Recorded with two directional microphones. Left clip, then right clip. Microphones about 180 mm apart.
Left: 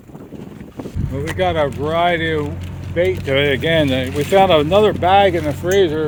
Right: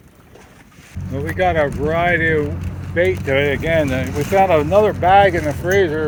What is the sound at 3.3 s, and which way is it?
Speech, 40° left (ahead or behind).